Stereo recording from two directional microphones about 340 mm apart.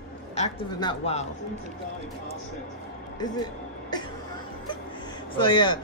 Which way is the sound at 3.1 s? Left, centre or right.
Centre.